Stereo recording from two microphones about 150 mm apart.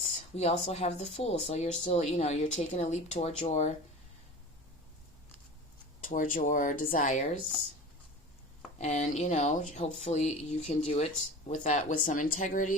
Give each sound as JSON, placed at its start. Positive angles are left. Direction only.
{"t": 0.3, "sound": "speech", "side_deg": 45}
{"t": 6.0, "sound": "speech", "side_deg": 60}
{"t": 8.8, "sound": "speech", "side_deg": 50}